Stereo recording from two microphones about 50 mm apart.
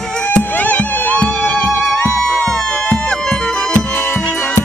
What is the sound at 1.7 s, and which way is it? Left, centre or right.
Music, left.